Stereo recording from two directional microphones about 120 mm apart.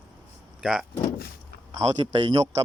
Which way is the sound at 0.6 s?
5° right (ahead or behind).